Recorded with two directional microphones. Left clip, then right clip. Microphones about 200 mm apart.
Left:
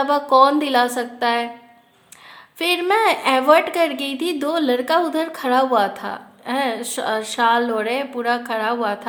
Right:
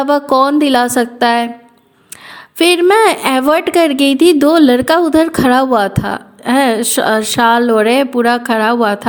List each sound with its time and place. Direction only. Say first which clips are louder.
0.0 s a woman's voice: right 3 dB; 35° right (ahead or behind)
2.6 s a woman's voice: right 9 dB; 40° right (ahead or behind)